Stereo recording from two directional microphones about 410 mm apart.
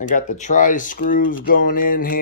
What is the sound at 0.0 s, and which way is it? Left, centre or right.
Speech, centre.